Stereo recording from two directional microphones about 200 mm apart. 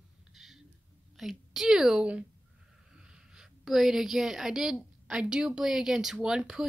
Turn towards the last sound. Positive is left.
turn(degrees=-5)  # may be behind; listen again after turning